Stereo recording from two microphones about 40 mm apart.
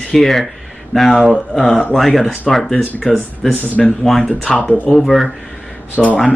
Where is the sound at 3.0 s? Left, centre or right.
Left.